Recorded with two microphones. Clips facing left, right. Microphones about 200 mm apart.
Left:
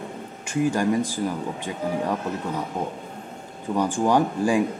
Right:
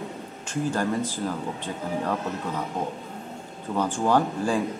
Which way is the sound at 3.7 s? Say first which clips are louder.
Left 2 dB; 15° left (ahead or behind).